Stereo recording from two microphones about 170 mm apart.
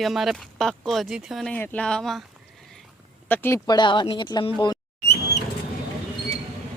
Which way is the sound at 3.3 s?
10° left (ahead or behind).